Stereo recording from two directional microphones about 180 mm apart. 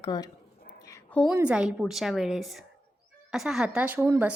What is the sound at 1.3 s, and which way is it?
A woman's voice, 5° right (ahead or behind).